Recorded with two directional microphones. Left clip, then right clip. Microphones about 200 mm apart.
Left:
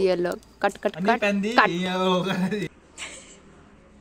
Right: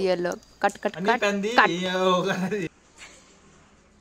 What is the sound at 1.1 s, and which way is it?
A man's voice, 25° right (ahead or behind).